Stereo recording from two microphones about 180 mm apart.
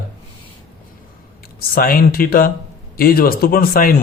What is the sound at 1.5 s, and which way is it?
A man's voice, 55° left (ahead or behind).